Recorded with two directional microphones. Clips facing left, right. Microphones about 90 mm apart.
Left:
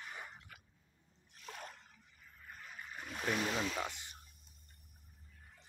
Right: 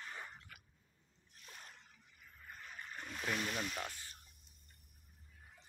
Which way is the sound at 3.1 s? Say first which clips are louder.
Left 4 dB; 25° left (ahead or behind).